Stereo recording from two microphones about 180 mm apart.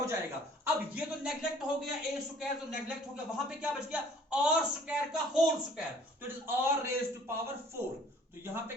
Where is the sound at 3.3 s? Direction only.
5° right (ahead or behind).